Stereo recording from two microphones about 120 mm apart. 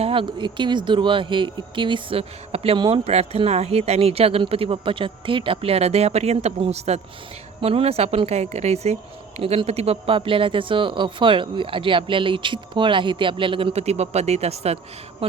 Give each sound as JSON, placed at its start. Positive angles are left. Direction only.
{"t": 0.0, "sound": "speech", "side_deg": -45}
{"t": 2.7, "sound": "speech", "side_deg": -40}
{"t": 3.0, "sound": "speech", "side_deg": -60}